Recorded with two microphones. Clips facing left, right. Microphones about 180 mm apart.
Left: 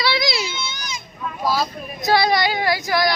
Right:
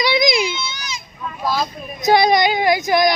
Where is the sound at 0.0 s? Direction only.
20° right (ahead or behind).